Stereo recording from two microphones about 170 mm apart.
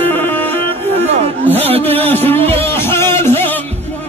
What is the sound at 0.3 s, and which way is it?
Music, 10° left (ahead or behind).